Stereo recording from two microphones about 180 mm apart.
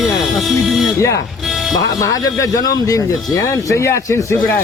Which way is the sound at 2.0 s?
20° left (ahead or behind).